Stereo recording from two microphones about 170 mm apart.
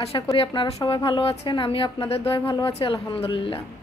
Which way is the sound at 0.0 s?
35° left (ahead or behind).